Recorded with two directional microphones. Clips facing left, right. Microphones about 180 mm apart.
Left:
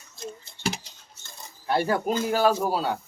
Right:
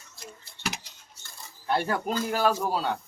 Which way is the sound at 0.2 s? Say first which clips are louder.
Left 6 dB; 25° left (ahead or behind).